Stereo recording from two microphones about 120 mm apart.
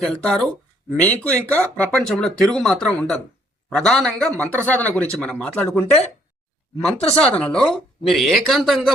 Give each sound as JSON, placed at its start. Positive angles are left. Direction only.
{"t": 0.0, "sound": "speech", "side_deg": 5}
{"t": 4.3, "sound": "speech", "side_deg": -25}
{"t": 4.5, "sound": "speech", "side_deg": 10}
{"t": 7.2, "sound": "speech", "side_deg": 5}